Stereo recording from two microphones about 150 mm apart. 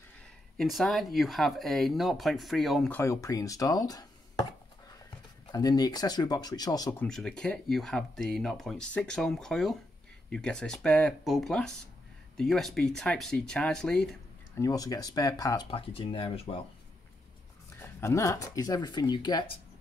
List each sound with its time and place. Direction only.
0.6 s speech: centre (ahead or behind)
2.9 s speech: 20° left (ahead or behind)
5.5 s speech: 25° left (ahead or behind)
7.0 s speech: 5° left (ahead or behind)
14.6 s speech: 25° left (ahead or behind)
15.7 s speech: 40° left (ahead or behind)
17.7 s speech: 15° left (ahead or behind)